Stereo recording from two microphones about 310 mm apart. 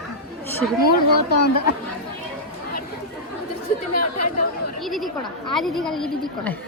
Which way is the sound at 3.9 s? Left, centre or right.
Left.